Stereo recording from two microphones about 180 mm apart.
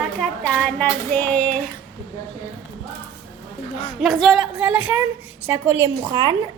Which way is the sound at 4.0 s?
Centre (ahead or behind).